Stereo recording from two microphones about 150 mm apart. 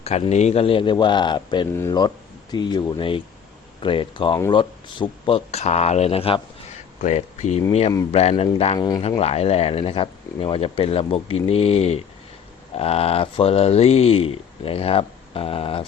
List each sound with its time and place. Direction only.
0.0 s speech: 45° left (ahead or behind); by 2.8 s 30° left (ahead or behind)
3.8 s speech: 35° left (ahead or behind)
7.0 s speech: 50° left (ahead or behind)